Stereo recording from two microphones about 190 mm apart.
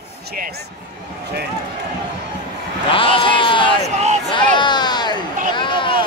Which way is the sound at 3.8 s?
35° right (ahead or behind).